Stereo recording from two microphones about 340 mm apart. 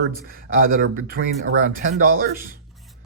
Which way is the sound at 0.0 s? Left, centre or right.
Right.